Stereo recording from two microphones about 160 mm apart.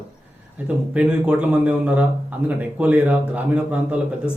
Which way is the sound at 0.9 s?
10° right (ahead or behind).